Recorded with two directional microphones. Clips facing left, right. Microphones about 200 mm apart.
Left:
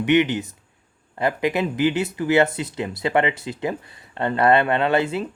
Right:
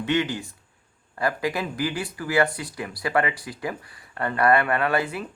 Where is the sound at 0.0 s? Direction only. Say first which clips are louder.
Left 6 dB; 20° left (ahead or behind).